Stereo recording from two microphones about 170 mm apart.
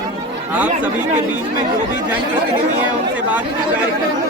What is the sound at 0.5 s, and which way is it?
Speech, 10° right (ahead or behind).